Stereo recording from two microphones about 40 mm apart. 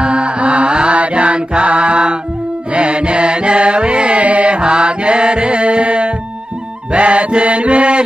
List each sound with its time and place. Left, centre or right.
0.0 s mantra: right
2.7 s music: right